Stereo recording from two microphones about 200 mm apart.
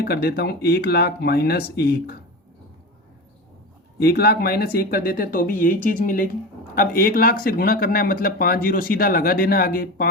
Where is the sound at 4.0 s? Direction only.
55° left (ahead or behind).